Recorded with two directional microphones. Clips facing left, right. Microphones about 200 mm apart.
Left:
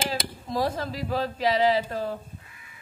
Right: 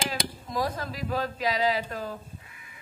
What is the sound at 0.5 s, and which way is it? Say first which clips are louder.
Speech: left 4 dB; 30° left (ahead or behind).